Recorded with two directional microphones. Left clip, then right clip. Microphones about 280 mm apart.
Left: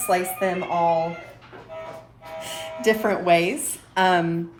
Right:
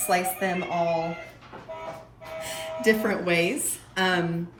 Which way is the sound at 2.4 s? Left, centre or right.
Centre.